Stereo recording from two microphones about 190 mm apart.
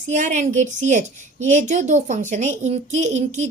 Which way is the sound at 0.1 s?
40° right (ahead or behind).